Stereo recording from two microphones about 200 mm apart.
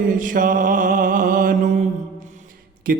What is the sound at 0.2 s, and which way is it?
Mantra, 40° right (ahead or behind).